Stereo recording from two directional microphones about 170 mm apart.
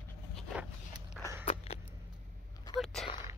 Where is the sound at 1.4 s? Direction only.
35° left (ahead or behind).